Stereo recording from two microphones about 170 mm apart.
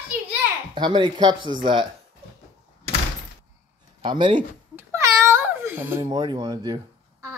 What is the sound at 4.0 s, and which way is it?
Speech, 30° right (ahead or behind).